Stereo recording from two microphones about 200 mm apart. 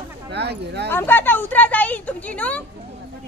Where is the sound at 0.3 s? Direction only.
55° right (ahead or behind).